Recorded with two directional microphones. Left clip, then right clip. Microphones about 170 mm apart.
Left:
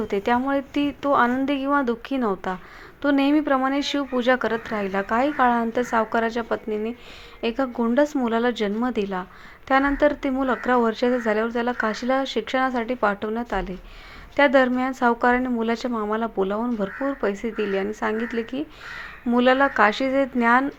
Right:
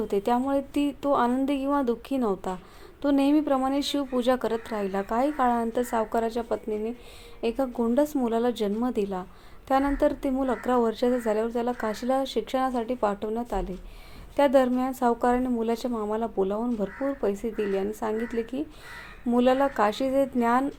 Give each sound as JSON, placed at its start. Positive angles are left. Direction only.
{"t": 0.1, "sound": "speech", "side_deg": 0}
{"t": 15.9, "sound": "speech", "side_deg": 20}
{"t": 16.1, "sound": "speech", "side_deg": 5}
{"t": 16.6, "sound": "speech", "side_deg": 25}
{"t": 17.2, "sound": "speech", "side_deg": 5}